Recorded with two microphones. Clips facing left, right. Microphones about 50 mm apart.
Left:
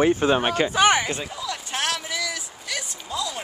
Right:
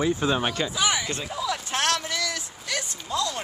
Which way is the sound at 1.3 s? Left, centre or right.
Centre.